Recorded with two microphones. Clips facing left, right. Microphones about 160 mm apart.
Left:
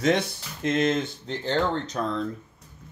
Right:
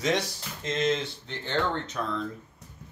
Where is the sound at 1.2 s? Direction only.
35° left (ahead or behind).